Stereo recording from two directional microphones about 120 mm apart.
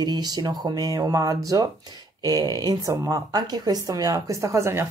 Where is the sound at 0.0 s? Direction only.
35° right (ahead or behind).